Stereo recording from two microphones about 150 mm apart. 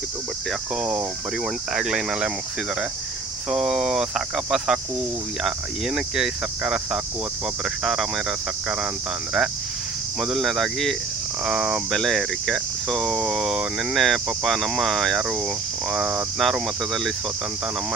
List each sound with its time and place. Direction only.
0.8 s speech: 5° right (ahead or behind)
3.5 s speech: 5° right (ahead or behind)
10.2 s speech: centre (ahead or behind)